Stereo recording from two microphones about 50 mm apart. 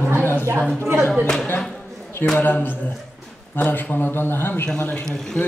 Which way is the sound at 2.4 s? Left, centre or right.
Left.